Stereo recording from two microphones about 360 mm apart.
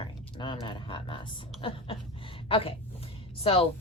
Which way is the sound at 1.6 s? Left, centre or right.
Centre.